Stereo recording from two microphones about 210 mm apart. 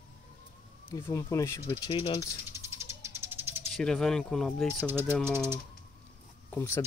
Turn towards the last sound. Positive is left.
turn(degrees=10)  # may be behind; listen again after turning